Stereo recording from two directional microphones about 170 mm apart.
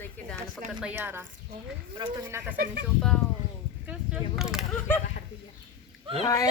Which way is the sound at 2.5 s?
55° right (ahead or behind).